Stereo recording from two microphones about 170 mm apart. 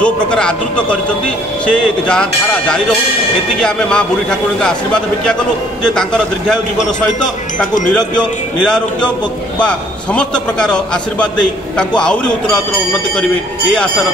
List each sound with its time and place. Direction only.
0.0 s a man's voice: 5° left (ahead or behind)
3.5 s a man's voice: 5° left (ahead or behind)
7.9 s a man's voice: 5° left (ahead or behind)